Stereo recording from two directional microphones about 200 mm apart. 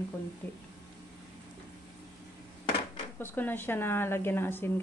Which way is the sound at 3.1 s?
10° left (ahead or behind).